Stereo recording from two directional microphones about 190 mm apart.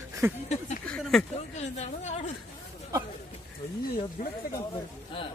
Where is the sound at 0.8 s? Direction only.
5° left (ahead or behind).